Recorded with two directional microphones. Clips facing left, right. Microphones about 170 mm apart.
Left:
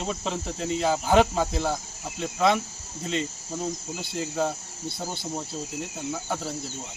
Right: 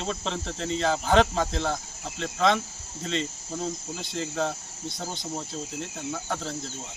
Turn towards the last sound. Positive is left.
turn(degrees=10)  # may be behind; listen again after turning